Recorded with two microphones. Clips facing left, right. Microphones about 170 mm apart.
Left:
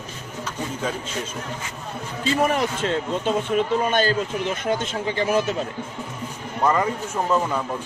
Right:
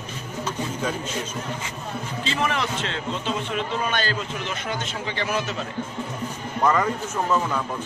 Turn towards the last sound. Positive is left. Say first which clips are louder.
# left 1 dB
turn(degrees=10)  # may be behind; listen again after turning